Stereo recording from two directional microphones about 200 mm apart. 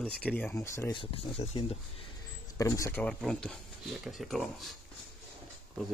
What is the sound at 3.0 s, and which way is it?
Speech, 5° left (ahead or behind).